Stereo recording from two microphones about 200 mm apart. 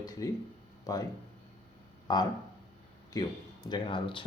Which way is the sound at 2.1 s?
20° left (ahead or behind).